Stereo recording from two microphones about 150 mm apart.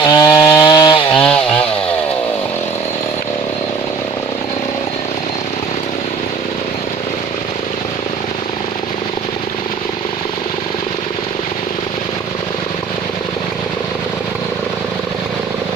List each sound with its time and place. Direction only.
0.1 s chainsaw: 25° left (ahead or behind)
1.1 s chainsaw: 5° left (ahead or behind)